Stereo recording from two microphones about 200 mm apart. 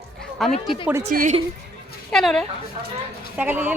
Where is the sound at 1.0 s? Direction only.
40° right (ahead or behind).